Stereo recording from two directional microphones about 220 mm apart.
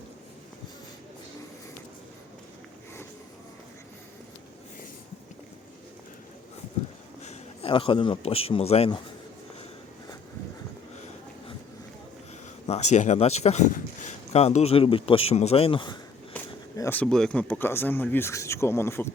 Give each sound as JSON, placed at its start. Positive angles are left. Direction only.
{"t": 7.2, "sound": "a man's voice", "side_deg": 30}
{"t": 12.6, "sound": "speech", "side_deg": 30}
{"t": 16.3, "sound": "speech", "side_deg": 10}